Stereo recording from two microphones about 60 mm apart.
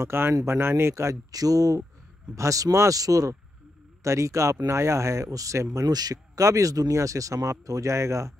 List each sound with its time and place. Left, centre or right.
0.0 s speech: right
1.3 s speech: right
2.3 s speech: right
4.0 s speech: right
5.8 s speech: right
7.9 s speech: right